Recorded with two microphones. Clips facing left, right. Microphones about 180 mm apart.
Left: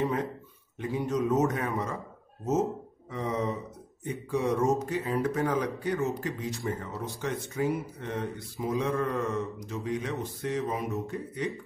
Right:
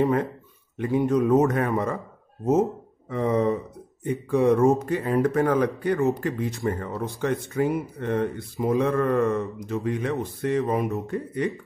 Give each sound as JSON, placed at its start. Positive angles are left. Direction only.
{"t": 0.0, "sound": "speech", "side_deg": -60}
{"t": 3.1, "sound": "speech", "side_deg": -60}